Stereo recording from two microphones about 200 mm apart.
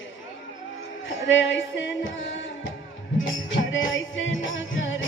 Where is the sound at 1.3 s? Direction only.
65° left (ahead or behind).